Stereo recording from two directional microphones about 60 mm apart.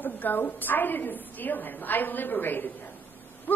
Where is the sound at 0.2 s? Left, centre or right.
Left.